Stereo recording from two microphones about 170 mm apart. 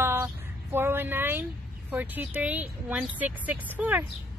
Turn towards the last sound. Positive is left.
turn(degrees=-10)  # may be behind; listen again after turning